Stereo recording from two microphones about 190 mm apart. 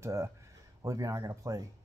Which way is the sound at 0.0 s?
15° right (ahead or behind).